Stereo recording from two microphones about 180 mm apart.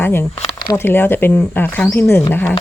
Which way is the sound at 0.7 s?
10° left (ahead or behind).